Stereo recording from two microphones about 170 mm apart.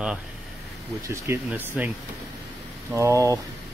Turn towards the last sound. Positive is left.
turn(degrees=-20)  # may be behind; listen again after turning